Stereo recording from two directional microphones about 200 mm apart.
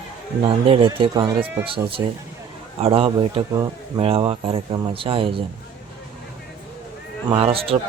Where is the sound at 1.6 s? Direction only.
25° right (ahead or behind).